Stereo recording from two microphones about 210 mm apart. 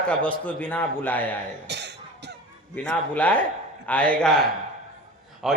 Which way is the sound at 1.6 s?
55° right (ahead or behind).